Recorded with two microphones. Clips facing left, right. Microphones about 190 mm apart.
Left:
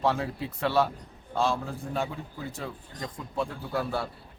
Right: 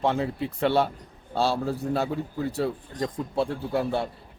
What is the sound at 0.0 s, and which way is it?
Speech, 25° right (ahead or behind).